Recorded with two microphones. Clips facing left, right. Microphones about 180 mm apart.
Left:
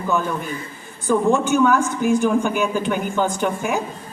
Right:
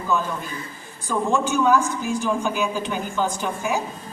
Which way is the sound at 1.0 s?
55° left (ahead or behind).